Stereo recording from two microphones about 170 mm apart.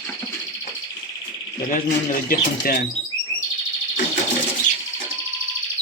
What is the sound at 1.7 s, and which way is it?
Speech, 55° left (ahead or behind).